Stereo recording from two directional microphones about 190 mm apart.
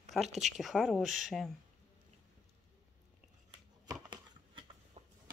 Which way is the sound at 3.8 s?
20° right (ahead or behind).